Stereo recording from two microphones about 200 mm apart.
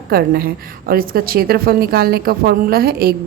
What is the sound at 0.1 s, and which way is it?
A woman's voice, 50° right (ahead or behind).